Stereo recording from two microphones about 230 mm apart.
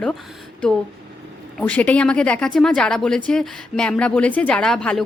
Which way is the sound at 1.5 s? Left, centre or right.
Centre.